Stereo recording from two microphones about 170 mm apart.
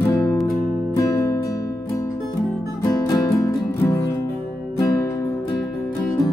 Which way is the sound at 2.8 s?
20° left (ahead or behind).